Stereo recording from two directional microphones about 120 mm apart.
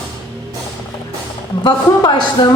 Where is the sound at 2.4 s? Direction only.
35° left (ahead or behind).